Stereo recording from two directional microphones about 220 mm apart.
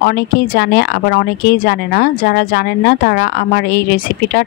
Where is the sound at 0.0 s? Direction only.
50° left (ahead or behind).